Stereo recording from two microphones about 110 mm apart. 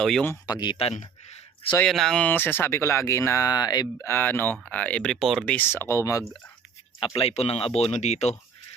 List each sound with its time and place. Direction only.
0.0 s speech: 5° left (ahead or behind)
0.4 s speech: 40° left (ahead or behind)
1.9 s speech: 5° left (ahead or behind)
2.2 s speech: 20° left (ahead or behind); by 4.0 s 35° left (ahead or behind)
4.0 s speech: 20° left (ahead or behind); by 5.5 s centre (ahead or behind)
5.5 s speech: 20° left (ahead or behind)
7.2 s speech: 65° left (ahead or behind); by 8.4 s 85° left